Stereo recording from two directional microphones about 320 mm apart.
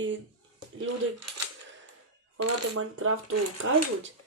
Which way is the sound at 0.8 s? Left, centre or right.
Right.